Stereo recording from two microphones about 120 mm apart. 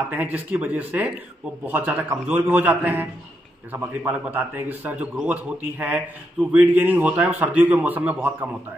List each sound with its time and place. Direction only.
0.1 s a man's voice: 15° right (ahead or behind)